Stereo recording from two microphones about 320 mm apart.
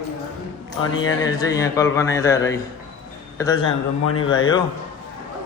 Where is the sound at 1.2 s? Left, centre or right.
Centre.